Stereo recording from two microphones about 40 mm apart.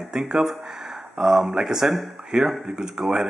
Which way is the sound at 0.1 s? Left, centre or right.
Centre.